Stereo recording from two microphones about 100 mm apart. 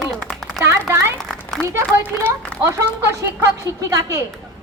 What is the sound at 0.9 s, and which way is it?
Speech, 30° right (ahead or behind).